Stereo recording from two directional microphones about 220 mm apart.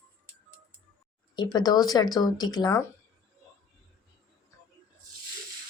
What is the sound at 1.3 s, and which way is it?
Speech, 20° left (ahead or behind).